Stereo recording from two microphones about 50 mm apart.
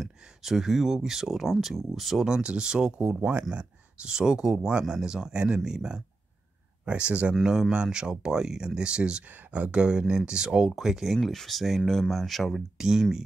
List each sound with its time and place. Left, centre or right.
0.0 s speech: centre
2.2 s speech: centre
11.1 s speech: centre
12.7 s speech: centre